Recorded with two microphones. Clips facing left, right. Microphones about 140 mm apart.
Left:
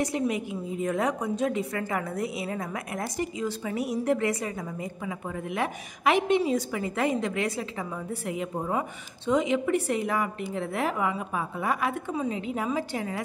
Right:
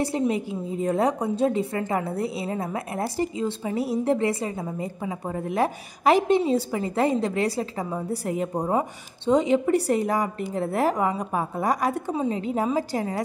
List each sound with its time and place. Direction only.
0.0 s a woman's voice: 30° right (ahead or behind)